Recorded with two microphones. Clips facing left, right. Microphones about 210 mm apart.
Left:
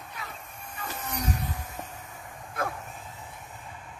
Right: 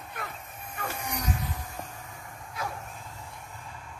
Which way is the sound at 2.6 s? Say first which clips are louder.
Left 4 dB; 55° left (ahead or behind).